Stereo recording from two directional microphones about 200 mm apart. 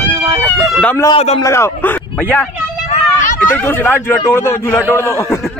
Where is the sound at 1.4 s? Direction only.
15° left (ahead or behind).